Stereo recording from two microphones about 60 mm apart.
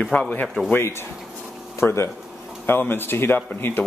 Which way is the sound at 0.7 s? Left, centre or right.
Left.